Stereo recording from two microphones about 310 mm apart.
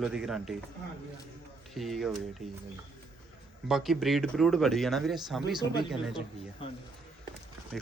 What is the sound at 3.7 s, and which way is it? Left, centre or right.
Speech, centre.